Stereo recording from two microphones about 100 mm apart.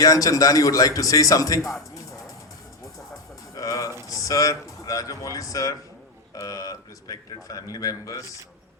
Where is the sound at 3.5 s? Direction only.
35° left (ahead or behind).